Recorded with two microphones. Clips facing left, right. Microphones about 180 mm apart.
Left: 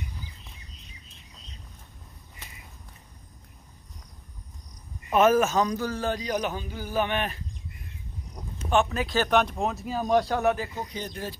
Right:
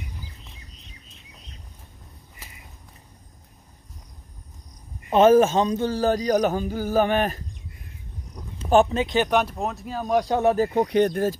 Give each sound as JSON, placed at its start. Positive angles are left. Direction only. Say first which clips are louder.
{"t": 5.1, "sound": "speech", "louder": "right 5 dB", "side_deg": -30}
{"t": 8.6, "sound": "speech", "louder": "right 6 dB", "side_deg": -30}
{"t": 9.4, "sound": "speech", "louder": "even", "side_deg": -5}
{"t": 10.2, "sound": "speech", "louder": "right 4 dB", "side_deg": -25}
{"t": 10.7, "sound": "speech", "louder": "right 15 dB", "side_deg": -70}